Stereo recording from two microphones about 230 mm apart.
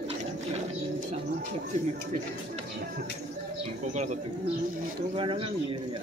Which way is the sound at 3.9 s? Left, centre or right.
Right.